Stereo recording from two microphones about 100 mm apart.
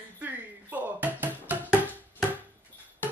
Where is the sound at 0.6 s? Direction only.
15° right (ahead or behind).